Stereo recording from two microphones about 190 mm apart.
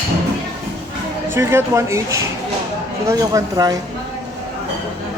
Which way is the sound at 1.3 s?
10° right (ahead or behind).